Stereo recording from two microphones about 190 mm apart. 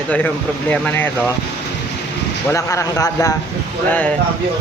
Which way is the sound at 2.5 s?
15° left (ahead or behind).